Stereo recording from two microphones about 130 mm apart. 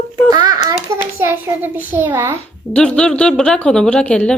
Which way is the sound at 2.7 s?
5° left (ahead or behind).